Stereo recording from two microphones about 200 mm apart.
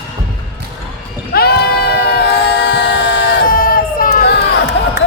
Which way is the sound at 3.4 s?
45° left (ahead or behind).